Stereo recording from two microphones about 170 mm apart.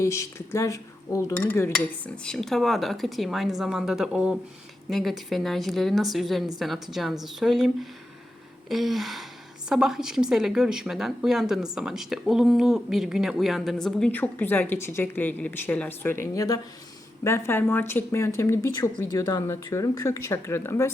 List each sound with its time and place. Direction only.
0.0 s a woman's voice: 15° left (ahead or behind)